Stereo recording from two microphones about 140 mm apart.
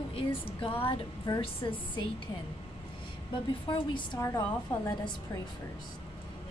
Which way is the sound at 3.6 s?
35° left (ahead or behind).